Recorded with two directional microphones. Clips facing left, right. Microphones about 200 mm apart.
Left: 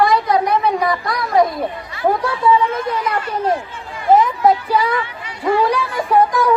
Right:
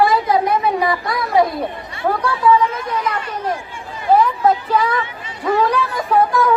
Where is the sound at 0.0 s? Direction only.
5° right (ahead or behind).